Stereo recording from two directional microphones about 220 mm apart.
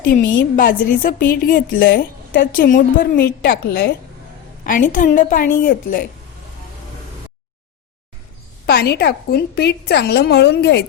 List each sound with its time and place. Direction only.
0.5 s a woman's voice: 40° left (ahead or behind)
8.6 s a woman's voice: 45° left (ahead or behind)